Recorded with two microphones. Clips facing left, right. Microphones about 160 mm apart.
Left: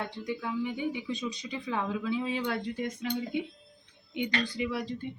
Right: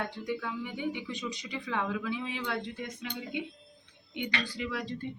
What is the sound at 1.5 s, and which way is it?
Speech, 25° left (ahead or behind).